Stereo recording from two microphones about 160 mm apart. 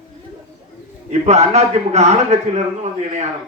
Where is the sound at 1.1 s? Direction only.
45° right (ahead or behind).